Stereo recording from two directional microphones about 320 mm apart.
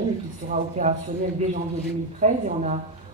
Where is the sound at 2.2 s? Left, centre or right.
Right.